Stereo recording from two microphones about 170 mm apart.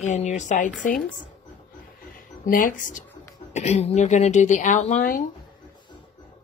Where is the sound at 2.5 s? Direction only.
50° left (ahead or behind).